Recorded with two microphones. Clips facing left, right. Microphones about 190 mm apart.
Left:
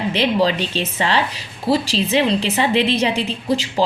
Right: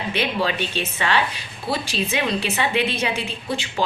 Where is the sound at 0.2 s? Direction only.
35° left (ahead or behind).